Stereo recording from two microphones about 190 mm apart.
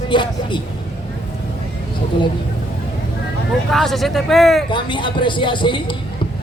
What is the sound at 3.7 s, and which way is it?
Speech, centre (ahead or behind).